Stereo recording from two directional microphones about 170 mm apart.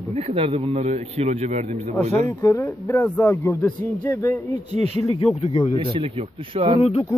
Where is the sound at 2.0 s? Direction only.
20° left (ahead or behind).